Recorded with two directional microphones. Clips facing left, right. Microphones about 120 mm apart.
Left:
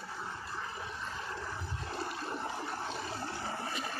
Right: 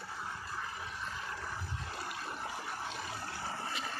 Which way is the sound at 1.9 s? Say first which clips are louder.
Left 6 dB; 25° left (ahead or behind).